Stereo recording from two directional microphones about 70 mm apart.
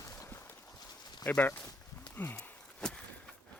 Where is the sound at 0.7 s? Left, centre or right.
Left.